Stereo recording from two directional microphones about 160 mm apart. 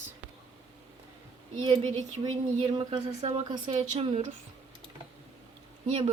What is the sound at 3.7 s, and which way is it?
Speech, 40° right (ahead or behind).